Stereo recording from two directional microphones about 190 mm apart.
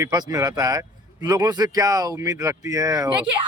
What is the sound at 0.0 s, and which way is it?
Speech, 20° right (ahead or behind).